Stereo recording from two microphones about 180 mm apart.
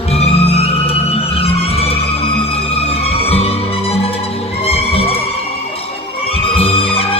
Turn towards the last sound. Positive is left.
turn(degrees=30)  # may be behind; listen again after turning